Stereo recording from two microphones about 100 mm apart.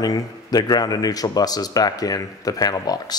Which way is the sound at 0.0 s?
40° left (ahead or behind).